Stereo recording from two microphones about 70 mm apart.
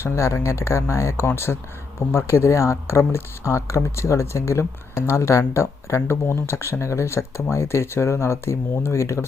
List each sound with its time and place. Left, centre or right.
0.0 s speech: left